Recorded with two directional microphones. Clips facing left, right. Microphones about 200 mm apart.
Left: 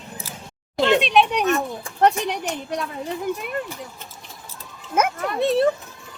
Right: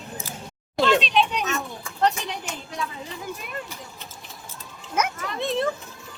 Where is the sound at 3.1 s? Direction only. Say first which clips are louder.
Left 8 dB; 55° left (ahead or behind).